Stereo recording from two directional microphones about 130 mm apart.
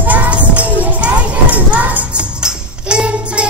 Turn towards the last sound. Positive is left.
turn(degrees=-10)  # may be behind; listen again after turning